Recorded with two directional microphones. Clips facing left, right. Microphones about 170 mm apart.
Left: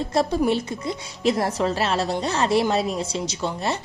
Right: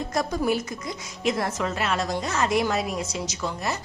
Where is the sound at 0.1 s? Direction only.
30° left (ahead or behind).